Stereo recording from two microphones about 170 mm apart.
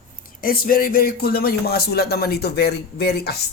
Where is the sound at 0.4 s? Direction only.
60° left (ahead or behind).